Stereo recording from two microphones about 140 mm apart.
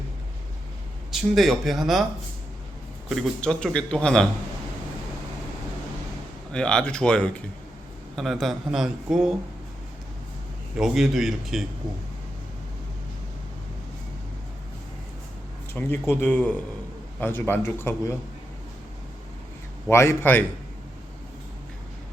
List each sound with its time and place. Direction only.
1.1 s speech: centre (ahead or behind)
3.1 s speech: 5° left (ahead or behind)
6.5 s speech: 5° left (ahead or behind)
10.8 s speech: 5° right (ahead or behind)
15.7 s speech: 15° left (ahead or behind)
19.9 s a man's voice: 20° left (ahead or behind)